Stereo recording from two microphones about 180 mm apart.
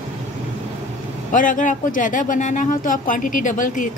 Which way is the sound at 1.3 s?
45° left (ahead or behind).